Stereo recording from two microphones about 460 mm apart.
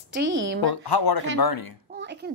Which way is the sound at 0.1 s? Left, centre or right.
Right.